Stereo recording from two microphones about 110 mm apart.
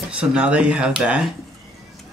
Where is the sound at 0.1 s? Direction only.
10° right (ahead or behind).